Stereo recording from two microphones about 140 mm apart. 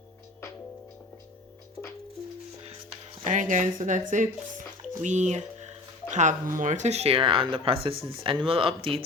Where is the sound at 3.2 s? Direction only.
65° right (ahead or behind).